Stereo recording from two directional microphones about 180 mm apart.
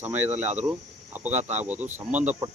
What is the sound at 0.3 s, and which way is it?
Speech, 40° right (ahead or behind).